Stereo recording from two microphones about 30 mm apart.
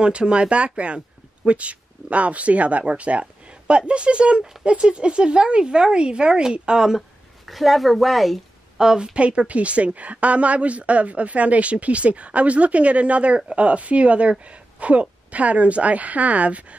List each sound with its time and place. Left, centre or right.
0.0 s speech: right
7.0 s speech: centre
8.7 s a woman's voice: right
9.1 s speech: right